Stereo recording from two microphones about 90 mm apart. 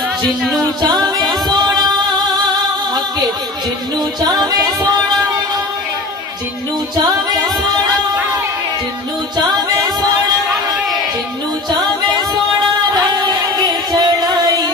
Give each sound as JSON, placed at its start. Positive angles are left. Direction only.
{"t": 0.9, "sound": "music", "side_deg": 0}
{"t": 1.5, "sound": "singing", "side_deg": -50}
{"t": 4.2, "sound": "music", "side_deg": -50}
{"t": 7.0, "sound": "music", "side_deg": -50}
{"t": 9.5, "sound": "music", "side_deg": -50}
{"t": 12.9, "sound": "music", "side_deg": -50}